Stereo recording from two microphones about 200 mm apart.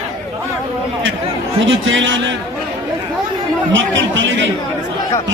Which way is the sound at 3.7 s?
70° right (ahead or behind).